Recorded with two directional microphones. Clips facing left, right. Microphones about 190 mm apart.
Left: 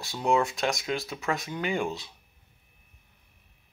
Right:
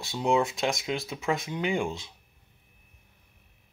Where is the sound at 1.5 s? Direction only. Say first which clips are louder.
Right 1 dB; 20° right (ahead or behind).